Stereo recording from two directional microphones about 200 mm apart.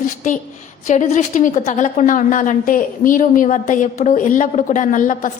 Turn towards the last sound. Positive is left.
turn(degrees=40)  # may be behind; listen again after turning